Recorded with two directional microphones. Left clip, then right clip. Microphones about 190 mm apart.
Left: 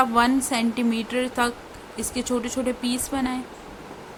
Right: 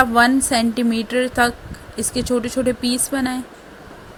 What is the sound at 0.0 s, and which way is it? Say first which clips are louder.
A woman's voice: right 5 dB; 25° right (ahead or behind).